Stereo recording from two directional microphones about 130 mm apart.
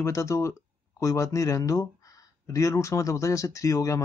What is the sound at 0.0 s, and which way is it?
Speech, 25° left (ahead or behind).